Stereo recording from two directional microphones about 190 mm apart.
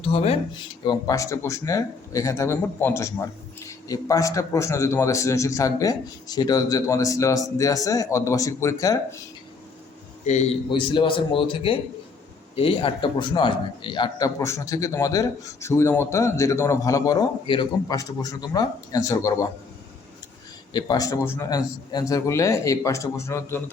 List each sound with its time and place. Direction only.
0.0 s a man's voice: 30° left (ahead or behind)
10.2 s a man's voice: 35° left (ahead or behind); by 19.5 s 15° left (ahead or behind)
20.7 s a man's voice: 20° left (ahead or behind)